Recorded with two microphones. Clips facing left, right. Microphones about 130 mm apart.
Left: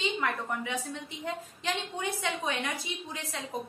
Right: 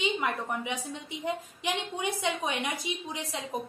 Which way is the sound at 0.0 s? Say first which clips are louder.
Right 1 dB; 20° right (ahead or behind).